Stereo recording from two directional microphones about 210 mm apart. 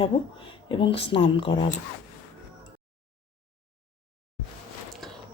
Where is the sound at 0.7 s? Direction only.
25° left (ahead or behind).